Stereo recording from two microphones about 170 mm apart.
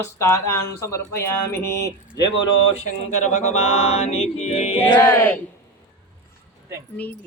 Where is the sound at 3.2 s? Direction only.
45° left (ahead or behind).